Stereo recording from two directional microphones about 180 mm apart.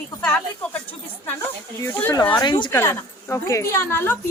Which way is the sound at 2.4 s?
25° left (ahead or behind).